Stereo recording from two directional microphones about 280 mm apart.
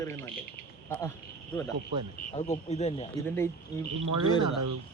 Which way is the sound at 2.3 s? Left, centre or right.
Left.